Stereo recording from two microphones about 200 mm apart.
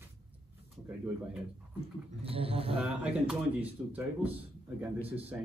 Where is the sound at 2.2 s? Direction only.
30° right (ahead or behind).